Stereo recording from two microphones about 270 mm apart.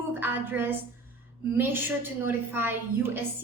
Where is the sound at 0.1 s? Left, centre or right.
Centre.